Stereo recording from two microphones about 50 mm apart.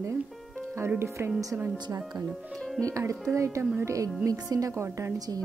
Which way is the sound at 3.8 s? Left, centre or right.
Right.